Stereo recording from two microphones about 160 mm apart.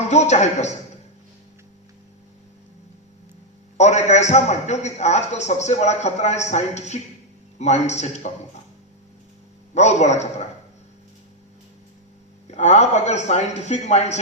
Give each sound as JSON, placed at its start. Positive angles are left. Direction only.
{"t": 0.1, "sound": "a man's voice", "side_deg": 45}
{"t": 3.8, "sound": "a man's voice", "side_deg": 45}
{"t": 9.7, "sound": "a man's voice", "side_deg": 45}
{"t": 12.5, "sound": "a man's voice", "side_deg": 45}